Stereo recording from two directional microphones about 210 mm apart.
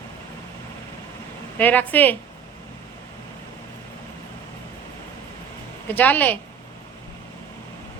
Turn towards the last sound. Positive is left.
turn(degrees=10)  # may be behind; listen again after turning